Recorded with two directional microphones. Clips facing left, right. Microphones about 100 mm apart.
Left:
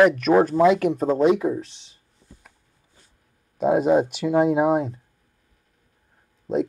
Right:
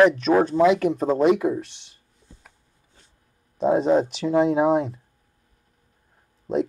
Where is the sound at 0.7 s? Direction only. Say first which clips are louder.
Even; 45° left (ahead or behind).